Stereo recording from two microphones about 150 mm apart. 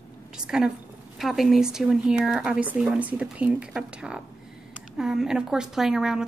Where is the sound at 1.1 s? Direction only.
Centre (ahead or behind).